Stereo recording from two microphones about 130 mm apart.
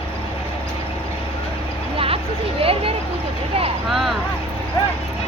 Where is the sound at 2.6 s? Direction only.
45° right (ahead or behind).